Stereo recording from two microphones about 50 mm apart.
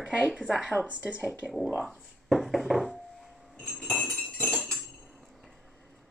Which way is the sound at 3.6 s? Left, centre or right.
Centre.